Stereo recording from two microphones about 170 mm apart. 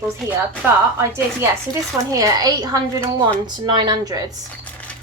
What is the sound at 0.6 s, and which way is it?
A woman's voice, 10° right (ahead or behind).